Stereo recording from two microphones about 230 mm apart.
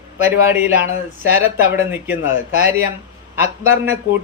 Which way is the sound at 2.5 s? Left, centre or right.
Right.